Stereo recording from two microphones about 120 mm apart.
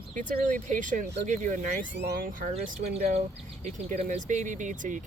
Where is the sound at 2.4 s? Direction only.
75° right (ahead or behind).